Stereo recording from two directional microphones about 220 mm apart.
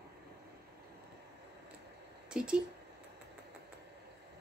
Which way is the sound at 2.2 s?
5° right (ahead or behind).